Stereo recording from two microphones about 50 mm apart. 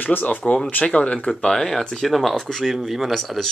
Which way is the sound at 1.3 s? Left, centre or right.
Centre.